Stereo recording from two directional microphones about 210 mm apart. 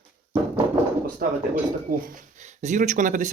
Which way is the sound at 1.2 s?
45° right (ahead or behind).